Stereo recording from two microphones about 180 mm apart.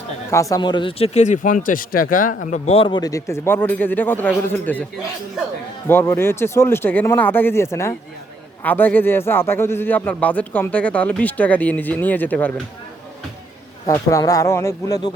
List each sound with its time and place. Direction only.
0.3 s speech: 15° left (ahead or behind); by 2.3 s 50° left (ahead or behind)
2.5 s speech: 35° left (ahead or behind); by 4.8 s 10° left (ahead or behind)
5.9 s speech: 10° left (ahead or behind)
13.8 s speech: 15° left (ahead or behind)